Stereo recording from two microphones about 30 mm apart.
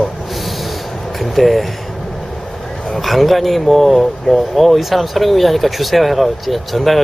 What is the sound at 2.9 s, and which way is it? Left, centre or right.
Speech, centre.